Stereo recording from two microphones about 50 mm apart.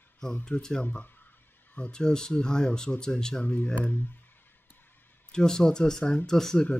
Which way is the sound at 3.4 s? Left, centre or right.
Left.